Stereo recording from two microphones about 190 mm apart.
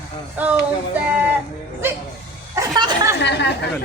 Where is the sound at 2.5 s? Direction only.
20° right (ahead or behind).